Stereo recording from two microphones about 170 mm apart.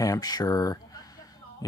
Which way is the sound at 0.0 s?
20° left (ahead or behind).